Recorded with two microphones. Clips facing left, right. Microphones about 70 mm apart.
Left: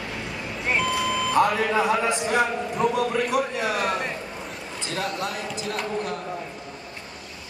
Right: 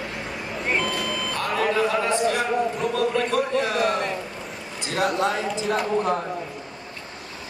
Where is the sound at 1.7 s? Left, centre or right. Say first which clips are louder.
Even; centre.